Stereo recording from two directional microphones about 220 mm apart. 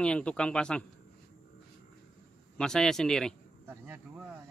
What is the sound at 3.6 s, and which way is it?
Speech, 10° right (ahead or behind).